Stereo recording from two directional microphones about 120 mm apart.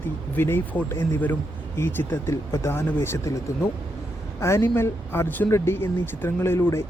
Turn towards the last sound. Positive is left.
turn(degrees=20)  # may be behind; listen again after turning